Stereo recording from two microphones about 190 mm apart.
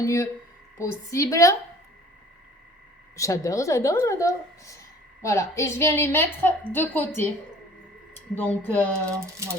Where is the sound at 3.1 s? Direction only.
15° left (ahead or behind).